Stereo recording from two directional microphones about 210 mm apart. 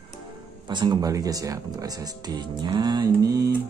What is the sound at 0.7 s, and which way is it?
Speech, 20° right (ahead or behind).